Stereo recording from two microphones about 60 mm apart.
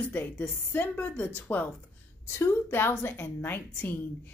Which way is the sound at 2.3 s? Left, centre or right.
Left.